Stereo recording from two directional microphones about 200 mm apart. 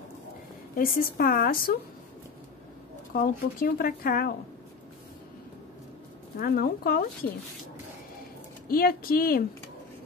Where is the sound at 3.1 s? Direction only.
45° left (ahead or behind).